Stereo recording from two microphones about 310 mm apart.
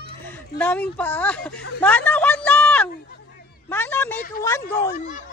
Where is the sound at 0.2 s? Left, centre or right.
Centre.